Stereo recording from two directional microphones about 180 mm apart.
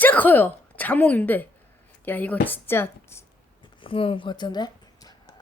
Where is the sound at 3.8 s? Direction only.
30° left (ahead or behind).